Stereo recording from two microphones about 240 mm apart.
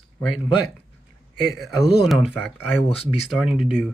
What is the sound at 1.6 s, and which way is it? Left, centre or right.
Speech, centre.